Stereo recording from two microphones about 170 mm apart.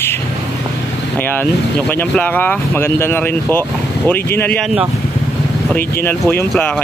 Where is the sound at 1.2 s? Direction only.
10° left (ahead or behind).